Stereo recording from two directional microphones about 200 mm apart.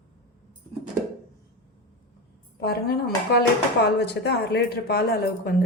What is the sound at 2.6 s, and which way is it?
A woman's voice, 55° left (ahead or behind).